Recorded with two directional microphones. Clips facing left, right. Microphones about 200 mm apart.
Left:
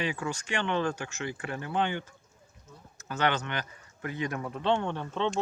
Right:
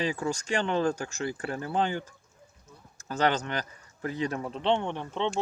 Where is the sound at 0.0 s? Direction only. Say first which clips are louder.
Right 3 dB; 40° right (ahead or behind).